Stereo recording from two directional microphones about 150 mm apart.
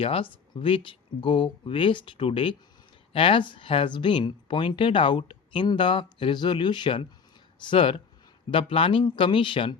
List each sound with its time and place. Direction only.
0.0 s speech: 35° left (ahead or behind)